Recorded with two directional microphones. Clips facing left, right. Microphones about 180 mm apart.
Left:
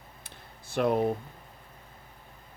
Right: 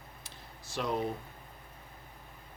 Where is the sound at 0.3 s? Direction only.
55° left (ahead or behind).